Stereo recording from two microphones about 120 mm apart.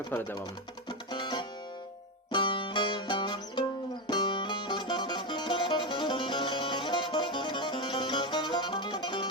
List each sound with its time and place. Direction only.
0.1 s speech: 15° left (ahead or behind)
0.9 s music: 40° left (ahead or behind)